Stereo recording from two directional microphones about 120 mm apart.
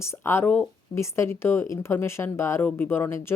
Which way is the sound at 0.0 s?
20° left (ahead or behind).